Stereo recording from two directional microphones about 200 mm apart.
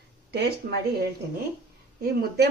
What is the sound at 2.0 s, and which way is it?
Speech, 50° right (ahead or behind).